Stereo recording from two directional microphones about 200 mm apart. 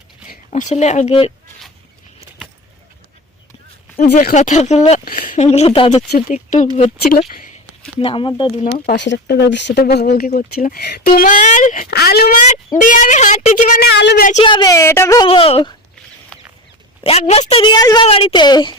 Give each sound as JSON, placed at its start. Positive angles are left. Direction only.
{"t": 0.3, "sound": "speech", "side_deg": 35}
{"t": 3.9, "sound": "speech", "side_deg": 40}
{"t": 6.1, "sound": "speech", "side_deg": 45}
{"t": 7.9, "sound": "a woman's voice", "side_deg": 25}
{"t": 9.0, "sound": "speech", "side_deg": 60}
{"t": 13.8, "sound": "speech", "side_deg": 55}
{"t": 14.4, "sound": "speech", "side_deg": 20}
{"t": 15.3, "sound": "a woman's voice", "side_deg": 30}
{"t": 16.3, "sound": "chicken", "side_deg": 5}
{"t": 17.0, "sound": "a woman's voice", "side_deg": 30}